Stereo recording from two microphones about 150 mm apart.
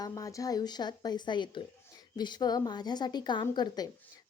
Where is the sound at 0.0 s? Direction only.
20° left (ahead or behind).